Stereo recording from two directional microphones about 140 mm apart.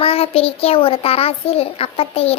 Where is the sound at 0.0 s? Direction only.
45° left (ahead or behind).